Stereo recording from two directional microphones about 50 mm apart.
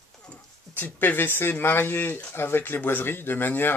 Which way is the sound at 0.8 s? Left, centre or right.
Left.